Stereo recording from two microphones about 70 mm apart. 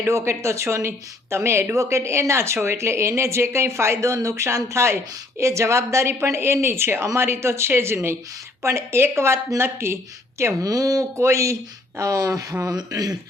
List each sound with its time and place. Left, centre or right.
0.0 s speech: right
10.6 s speech: right